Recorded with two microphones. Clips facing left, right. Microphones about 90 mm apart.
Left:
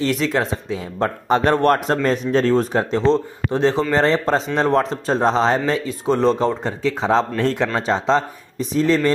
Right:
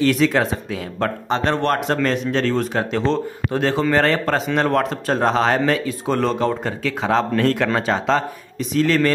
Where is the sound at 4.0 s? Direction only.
20° left (ahead or behind).